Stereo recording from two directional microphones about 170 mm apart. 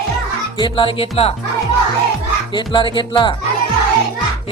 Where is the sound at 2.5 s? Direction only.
30° left (ahead or behind).